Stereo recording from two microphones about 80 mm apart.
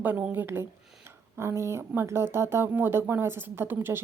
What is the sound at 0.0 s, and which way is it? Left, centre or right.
A woman's voice, right.